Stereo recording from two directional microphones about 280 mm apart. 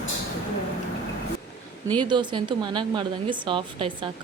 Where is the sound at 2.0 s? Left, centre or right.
Centre.